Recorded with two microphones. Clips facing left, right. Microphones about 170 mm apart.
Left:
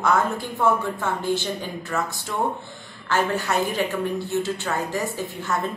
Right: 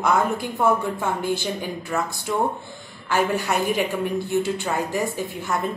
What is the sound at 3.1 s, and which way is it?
A woman's voice, 10° right (ahead or behind).